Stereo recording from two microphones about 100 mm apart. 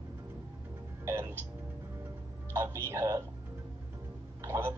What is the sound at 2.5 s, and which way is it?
Speech, 25° right (ahead or behind).